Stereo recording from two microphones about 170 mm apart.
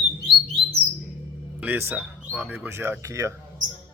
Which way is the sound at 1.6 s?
10° right (ahead or behind).